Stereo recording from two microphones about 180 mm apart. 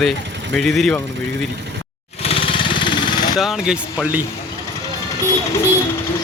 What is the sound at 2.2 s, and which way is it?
Vehicle, 30° left (ahead or behind).